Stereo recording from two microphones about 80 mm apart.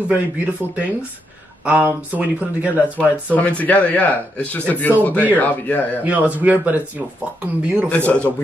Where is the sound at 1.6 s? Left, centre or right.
Centre.